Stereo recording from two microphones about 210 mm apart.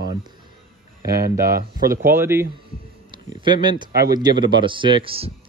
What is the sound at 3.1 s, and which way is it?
Speech, 20° right (ahead or behind).